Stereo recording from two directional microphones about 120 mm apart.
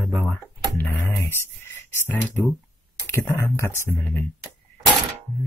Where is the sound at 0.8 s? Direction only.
15° left (ahead or behind).